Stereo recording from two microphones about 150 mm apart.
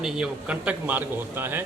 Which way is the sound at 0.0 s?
5° right (ahead or behind).